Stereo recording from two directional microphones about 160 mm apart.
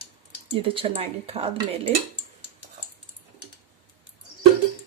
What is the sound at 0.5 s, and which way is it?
Speech, 35° right (ahead or behind).